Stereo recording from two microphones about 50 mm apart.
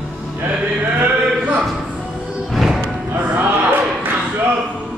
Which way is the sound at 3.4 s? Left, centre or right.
Right.